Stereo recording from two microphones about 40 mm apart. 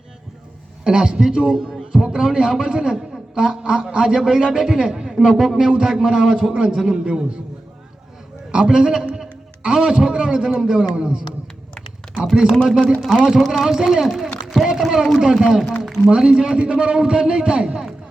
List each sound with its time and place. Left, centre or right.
0.9 s a man's voice: right
5.3 s a man's voice: centre
5.7 s a man's voice: centre
8.5 s a man's voice: right
12.2 s a man's voice: centre
16.0 s a man's voice: right